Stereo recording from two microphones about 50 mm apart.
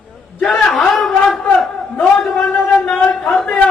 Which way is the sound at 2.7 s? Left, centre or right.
Left.